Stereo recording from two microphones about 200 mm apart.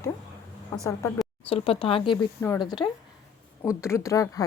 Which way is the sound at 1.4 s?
30° left (ahead or behind).